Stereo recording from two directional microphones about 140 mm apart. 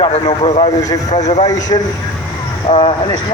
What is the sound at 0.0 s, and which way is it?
A man's voice, 45° left (ahead or behind).